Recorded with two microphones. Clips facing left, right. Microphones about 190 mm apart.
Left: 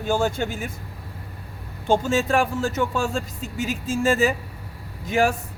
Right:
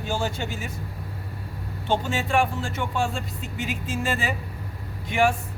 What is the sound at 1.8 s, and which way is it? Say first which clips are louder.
Speech: left 5 dB; 45° left (ahead or behind).